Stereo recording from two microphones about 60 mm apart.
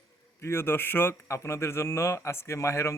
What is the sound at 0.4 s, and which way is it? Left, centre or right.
Mantra, left.